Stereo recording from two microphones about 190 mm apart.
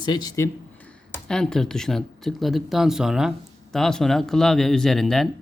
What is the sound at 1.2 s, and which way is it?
Speech, 5° left (ahead or behind).